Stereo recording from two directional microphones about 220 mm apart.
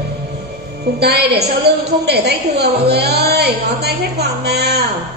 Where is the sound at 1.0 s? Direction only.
45° right (ahead or behind).